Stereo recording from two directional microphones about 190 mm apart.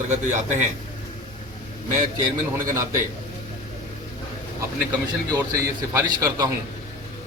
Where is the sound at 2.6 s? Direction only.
15° right (ahead or behind).